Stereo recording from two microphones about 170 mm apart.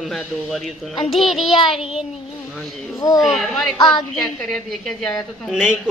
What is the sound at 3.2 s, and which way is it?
A woman's voice, centre (ahead or behind).